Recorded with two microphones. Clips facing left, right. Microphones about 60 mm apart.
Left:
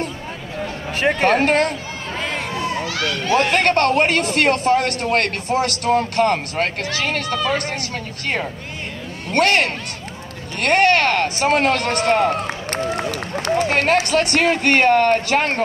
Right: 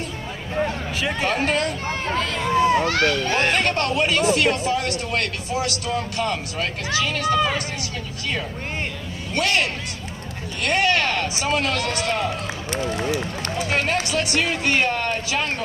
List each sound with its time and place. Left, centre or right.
0.9 s speech: left
2.8 s speech: right
3.5 s speech: left
9.3 s speech: left